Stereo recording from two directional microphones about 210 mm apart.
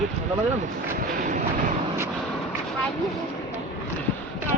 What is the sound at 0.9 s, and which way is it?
Vehicle, 40° right (ahead or behind).